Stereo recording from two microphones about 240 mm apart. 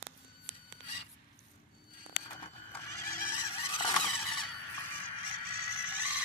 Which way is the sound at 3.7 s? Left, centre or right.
Centre.